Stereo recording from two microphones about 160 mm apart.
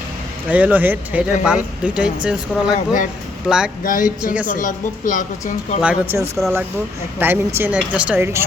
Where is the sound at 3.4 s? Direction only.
5° right (ahead or behind).